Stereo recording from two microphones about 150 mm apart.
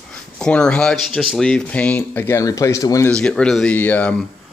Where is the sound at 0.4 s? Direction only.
5° left (ahead or behind).